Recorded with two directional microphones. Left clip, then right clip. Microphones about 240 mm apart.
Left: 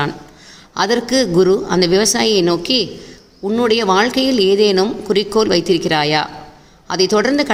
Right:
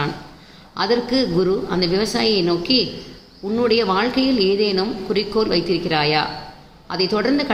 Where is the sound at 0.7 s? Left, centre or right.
Left.